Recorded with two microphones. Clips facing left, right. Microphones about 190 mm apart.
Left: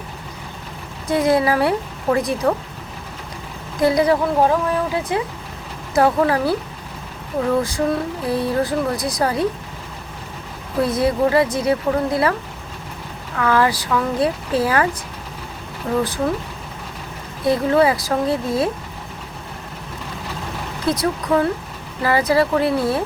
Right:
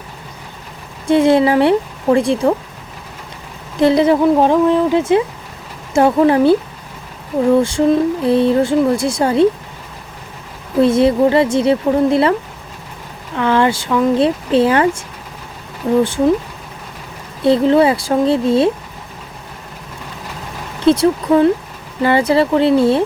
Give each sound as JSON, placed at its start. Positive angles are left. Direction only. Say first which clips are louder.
{"t": 1.0, "sound": "speech", "louder": "right 6 dB", "side_deg": -30}
{"t": 3.8, "sound": "speech", "louder": "right 5 dB", "side_deg": -25}
{"t": 7.6, "sound": "speech", "louder": "right 7 dB", "side_deg": -30}
{"t": 10.8, "sound": "speech", "louder": "right 6 dB", "side_deg": -25}
{"t": 13.3, "sound": "speech", "louder": "right 3 dB", "side_deg": -25}
{"t": 17.4, "sound": "speech", "louder": "right 5 dB", "side_deg": -25}
{"t": 20.8, "sound": "speech", "louder": "right 9 dB", "side_deg": -30}